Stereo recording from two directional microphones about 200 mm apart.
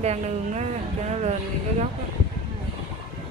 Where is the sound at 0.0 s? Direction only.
35° right (ahead or behind).